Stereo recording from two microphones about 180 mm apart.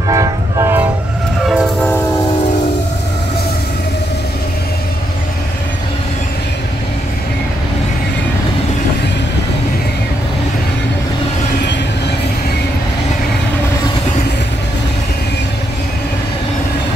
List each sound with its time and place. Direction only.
0.1 s train: 20° right (ahead or behind)
1.5 s train: centre (ahead or behind)